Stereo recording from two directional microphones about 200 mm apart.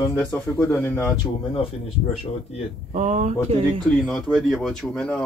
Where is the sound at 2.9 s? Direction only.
35° right (ahead or behind).